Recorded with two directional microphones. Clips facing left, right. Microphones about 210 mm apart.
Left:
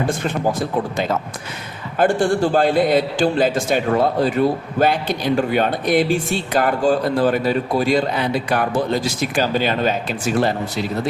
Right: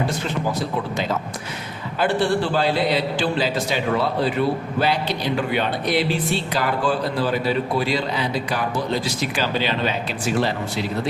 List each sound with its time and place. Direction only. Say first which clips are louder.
2.0 s a man's voice: left 4 dB; 45° left (ahead or behind)